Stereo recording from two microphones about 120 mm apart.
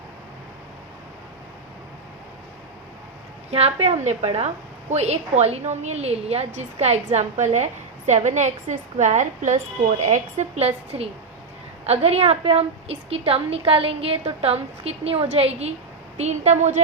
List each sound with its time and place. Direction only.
3.5 s a woman's voice: 60° right (ahead or behind); by 9.6 s 85° right
10.0 s a woman's voice: 75° right (ahead or behind)